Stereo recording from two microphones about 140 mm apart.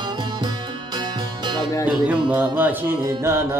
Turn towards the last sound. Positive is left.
turn(degrees=-20)  # may be behind; listen again after turning